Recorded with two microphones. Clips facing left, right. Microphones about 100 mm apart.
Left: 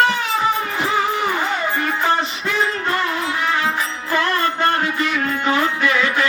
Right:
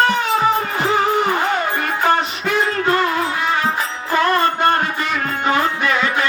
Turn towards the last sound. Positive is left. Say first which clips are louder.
# right 1 dB
turn(degrees=-35)  # may be behind; listen again after turning